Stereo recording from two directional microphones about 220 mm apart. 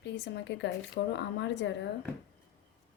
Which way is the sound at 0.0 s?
55° left (ahead or behind).